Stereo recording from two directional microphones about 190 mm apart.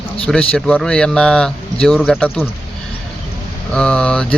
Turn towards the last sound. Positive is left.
turn(degrees=5)  # may be behind; listen again after turning